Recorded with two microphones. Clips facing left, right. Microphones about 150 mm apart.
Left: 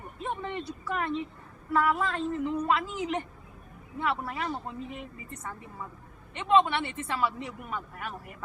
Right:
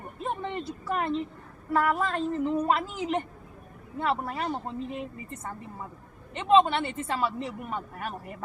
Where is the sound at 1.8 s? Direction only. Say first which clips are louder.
Right 1 dB; 45° right (ahead or behind).